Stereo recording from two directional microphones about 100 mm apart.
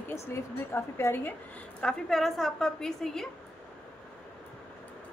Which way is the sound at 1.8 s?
5° left (ahead or behind).